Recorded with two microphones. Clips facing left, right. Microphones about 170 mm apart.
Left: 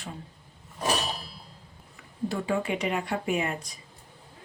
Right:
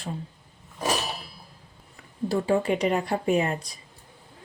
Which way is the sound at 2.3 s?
35° right (ahead or behind).